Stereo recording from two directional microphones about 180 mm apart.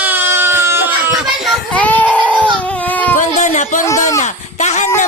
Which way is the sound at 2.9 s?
10° left (ahead or behind).